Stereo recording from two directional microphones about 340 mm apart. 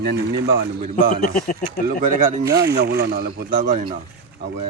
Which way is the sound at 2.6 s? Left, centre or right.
Right.